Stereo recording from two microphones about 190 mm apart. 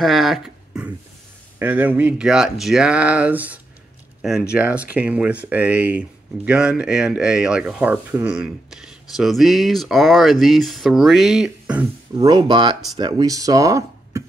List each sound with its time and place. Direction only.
0.0 s speech: centre (ahead or behind)
12.2 s speech: 25° right (ahead or behind)